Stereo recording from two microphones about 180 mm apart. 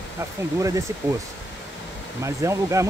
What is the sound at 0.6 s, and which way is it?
Speech, 15° right (ahead or behind).